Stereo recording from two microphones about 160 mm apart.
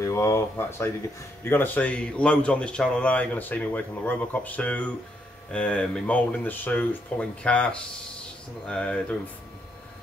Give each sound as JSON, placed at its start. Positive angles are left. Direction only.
{"t": 0.0, "sound": "speech", "side_deg": 20}